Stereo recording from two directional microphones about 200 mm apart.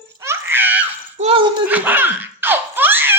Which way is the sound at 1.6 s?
10° right (ahead or behind).